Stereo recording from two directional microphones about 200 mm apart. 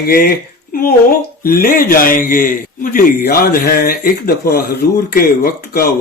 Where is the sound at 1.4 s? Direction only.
45° left (ahead or behind).